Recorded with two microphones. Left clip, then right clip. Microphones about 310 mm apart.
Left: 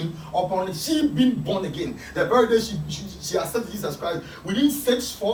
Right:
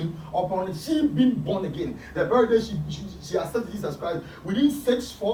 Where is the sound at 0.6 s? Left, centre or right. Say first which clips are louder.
Left 2 dB; centre.